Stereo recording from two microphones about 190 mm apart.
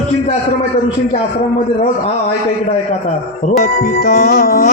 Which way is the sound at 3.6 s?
55° left (ahead or behind).